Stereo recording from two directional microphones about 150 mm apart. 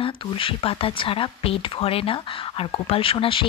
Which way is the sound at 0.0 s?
35° left (ahead or behind).